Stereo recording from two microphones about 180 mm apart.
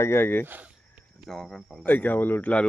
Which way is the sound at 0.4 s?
10° right (ahead or behind).